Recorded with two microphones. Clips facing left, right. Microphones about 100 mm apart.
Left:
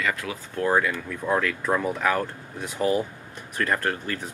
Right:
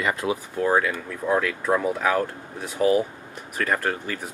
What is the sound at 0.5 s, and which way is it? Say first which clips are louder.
Speech: even; 10° right (ahead or behind).